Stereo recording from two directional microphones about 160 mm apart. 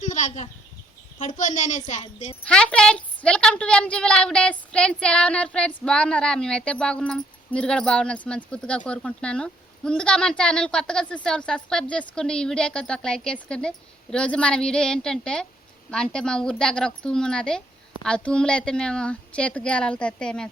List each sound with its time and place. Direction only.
0.0 s a sound: 50° left (ahead or behind)
1.2 s a woman's voice: 50° left (ahead or behind)
2.0 s speech: 35° left (ahead or behind)
2.4 s a woman's voice: 5° left (ahead or behind)